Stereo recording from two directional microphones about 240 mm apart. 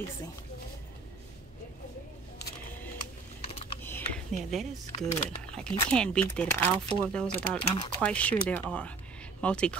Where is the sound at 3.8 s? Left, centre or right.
Centre.